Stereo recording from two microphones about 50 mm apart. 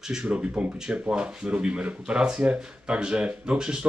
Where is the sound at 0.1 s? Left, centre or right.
Centre.